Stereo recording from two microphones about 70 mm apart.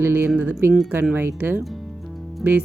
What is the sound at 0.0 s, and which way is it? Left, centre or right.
Speech, right.